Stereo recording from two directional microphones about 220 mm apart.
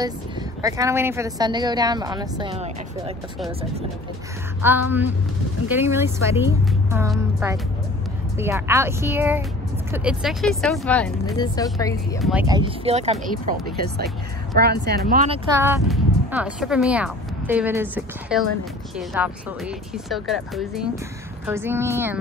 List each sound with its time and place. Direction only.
0.0 s speech: 15° right (ahead or behind)
4.6 s speech: 10° right (ahead or behind)
11.3 s speech: 15° left (ahead or behind)
12.2 s speech: centre (ahead or behind)
12.4 s speech: 20° right (ahead or behind)
14.6 s speech: 45° right (ahead or behind)
15.5 s speech: 10° right (ahead or behind)
21.5 s speech: 10° right (ahead or behind)